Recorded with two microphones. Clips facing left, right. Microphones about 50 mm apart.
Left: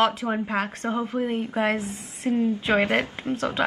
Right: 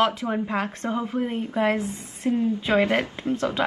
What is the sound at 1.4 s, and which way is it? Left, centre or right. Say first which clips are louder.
Speech: right 1 dB; left.